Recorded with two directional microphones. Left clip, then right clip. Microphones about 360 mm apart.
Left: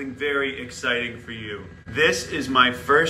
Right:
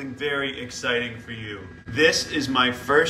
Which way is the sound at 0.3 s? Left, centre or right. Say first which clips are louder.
Left 2 dB; centre.